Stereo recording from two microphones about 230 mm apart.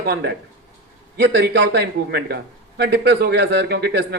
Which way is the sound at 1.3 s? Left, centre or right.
Right.